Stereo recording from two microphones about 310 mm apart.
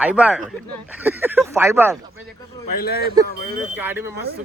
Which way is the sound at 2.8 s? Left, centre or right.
Left.